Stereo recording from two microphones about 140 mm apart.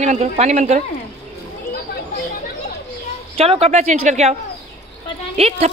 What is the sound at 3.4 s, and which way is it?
Speech, 45° right (ahead or behind).